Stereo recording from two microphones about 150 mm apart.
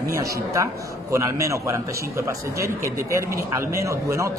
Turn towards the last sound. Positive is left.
turn(degrees=-20)  # may be behind; listen again after turning